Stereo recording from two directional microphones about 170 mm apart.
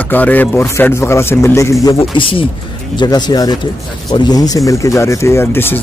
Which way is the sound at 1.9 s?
35° left (ahead or behind).